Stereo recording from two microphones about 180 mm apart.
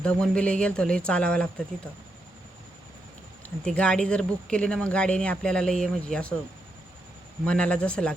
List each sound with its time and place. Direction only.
0.0 s speech: 5° left (ahead or behind)
3.6 s speech: 5° left (ahead or behind)
7.4 s speech: 5° left (ahead or behind)